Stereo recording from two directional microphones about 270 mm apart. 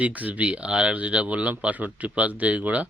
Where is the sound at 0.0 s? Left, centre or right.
Centre.